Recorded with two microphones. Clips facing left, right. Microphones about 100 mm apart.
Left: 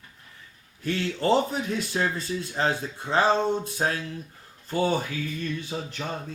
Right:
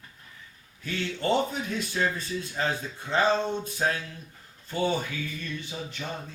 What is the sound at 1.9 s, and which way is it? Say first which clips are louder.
Speech: even; 35° left (ahead or behind).